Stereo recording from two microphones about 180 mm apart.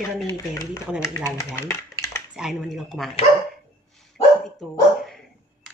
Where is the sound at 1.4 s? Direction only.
15° left (ahead or behind).